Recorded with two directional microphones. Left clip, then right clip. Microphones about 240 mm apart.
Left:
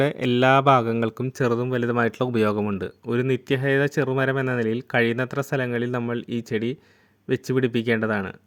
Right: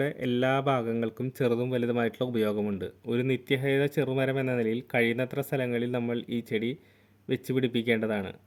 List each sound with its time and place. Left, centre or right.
0.0 s speech: left